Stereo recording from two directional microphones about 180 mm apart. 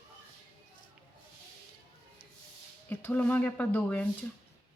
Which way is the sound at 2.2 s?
55° left (ahead or behind).